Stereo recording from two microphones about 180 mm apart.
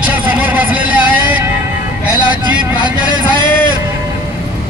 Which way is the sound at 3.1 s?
25° right (ahead or behind).